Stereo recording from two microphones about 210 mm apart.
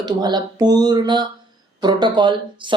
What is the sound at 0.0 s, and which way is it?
Speech, 20° right (ahead or behind).